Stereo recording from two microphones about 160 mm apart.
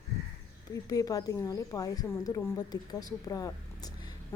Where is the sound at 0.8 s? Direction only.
25° left (ahead or behind).